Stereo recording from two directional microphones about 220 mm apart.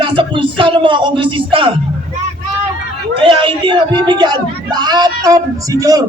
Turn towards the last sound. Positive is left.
turn(degrees=-15)  # may be behind; listen again after turning